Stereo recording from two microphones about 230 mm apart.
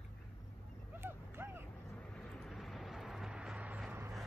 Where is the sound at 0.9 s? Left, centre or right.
Centre.